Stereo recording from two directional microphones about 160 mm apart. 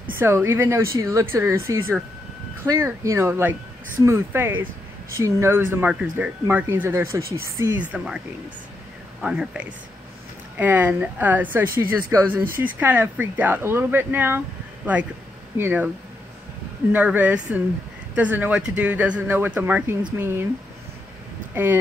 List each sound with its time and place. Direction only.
0.2 s speech: 15° right (ahead or behind)
7.8 s speech: 5° right (ahead or behind)
9.2 s speech: 5° right (ahead or behind)
15.5 s speech: 10° right (ahead or behind)
16.9 s speech: 10° right (ahead or behind)